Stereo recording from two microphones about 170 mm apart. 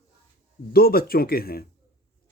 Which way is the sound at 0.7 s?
60° left (ahead or behind).